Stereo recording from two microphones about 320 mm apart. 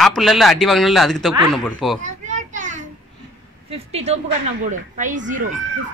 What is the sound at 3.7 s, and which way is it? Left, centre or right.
Speech, centre.